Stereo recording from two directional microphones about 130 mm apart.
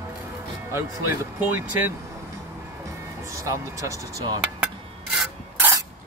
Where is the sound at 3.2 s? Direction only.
25° right (ahead or behind).